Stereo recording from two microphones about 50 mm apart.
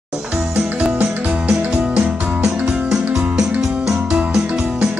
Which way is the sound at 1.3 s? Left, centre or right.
Right.